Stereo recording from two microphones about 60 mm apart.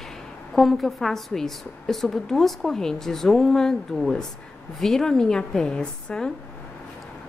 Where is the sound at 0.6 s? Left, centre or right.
Centre.